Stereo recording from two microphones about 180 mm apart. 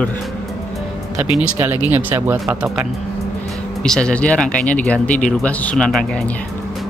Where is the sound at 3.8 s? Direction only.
5° left (ahead or behind).